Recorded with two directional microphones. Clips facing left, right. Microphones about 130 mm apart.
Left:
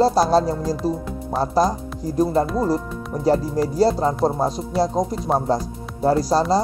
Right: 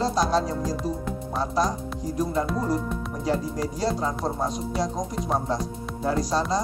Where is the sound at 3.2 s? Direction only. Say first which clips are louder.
Left 8 dB; 35° left (ahead or behind).